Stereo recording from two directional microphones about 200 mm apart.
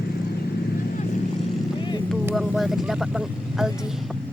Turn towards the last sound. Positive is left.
turn(degrees=0)  # may be behind; listen again after turning